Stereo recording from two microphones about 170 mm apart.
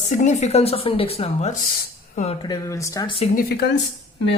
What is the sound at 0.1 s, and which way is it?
Speech, 45° left (ahead or behind).